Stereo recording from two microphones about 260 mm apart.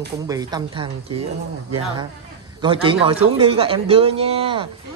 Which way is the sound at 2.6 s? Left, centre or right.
Centre.